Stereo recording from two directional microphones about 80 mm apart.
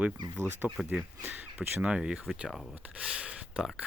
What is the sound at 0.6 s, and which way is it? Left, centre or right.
Speech, right.